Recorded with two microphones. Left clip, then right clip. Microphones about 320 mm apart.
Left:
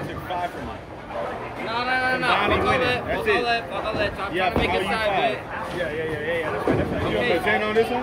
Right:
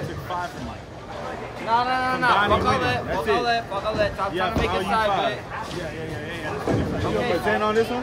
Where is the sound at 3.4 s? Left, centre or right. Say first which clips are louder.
Even; right.